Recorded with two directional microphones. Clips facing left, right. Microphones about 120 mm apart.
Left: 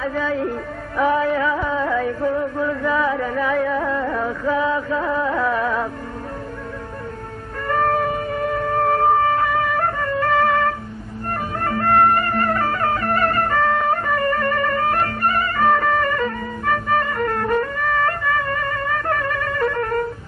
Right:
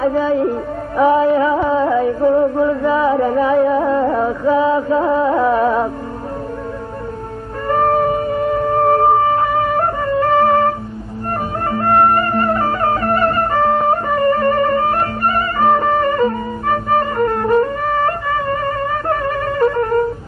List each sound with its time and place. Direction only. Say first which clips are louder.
0.0 s music: right 7 dB; 30° right (ahead or behind)
7.6 s shofar: right 5 dB; 30° right (ahead or behind)
11.7 s music: right 3 dB; 25° right (ahead or behind)